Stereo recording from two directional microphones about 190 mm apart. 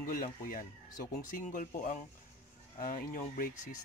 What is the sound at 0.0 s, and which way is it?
Speech, 50° left (ahead or behind).